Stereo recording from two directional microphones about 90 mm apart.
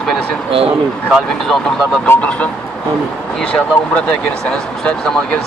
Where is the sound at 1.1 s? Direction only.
5° left (ahead or behind).